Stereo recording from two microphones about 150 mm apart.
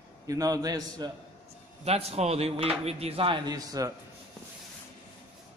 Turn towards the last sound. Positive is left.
turn(degrees=-25)  # may be behind; listen again after turning